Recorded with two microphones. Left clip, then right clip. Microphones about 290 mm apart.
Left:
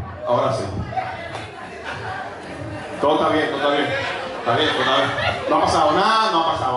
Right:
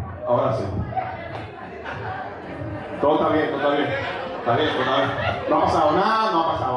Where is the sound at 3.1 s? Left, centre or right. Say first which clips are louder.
Left 2 dB; centre.